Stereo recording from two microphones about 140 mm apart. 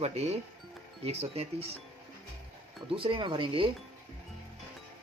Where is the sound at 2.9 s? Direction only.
40° right (ahead or behind).